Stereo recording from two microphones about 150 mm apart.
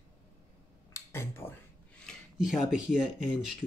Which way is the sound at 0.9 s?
15° left (ahead or behind).